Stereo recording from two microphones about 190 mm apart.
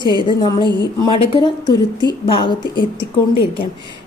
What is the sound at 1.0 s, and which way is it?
A woman's voice, 25° left (ahead or behind).